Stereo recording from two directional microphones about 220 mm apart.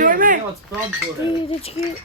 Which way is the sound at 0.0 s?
40° right (ahead or behind).